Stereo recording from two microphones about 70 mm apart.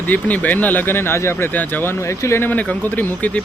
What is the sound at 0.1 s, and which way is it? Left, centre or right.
Speech, left.